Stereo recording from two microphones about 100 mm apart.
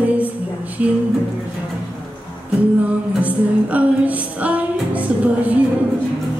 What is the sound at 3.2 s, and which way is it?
Music, 15° right (ahead or behind).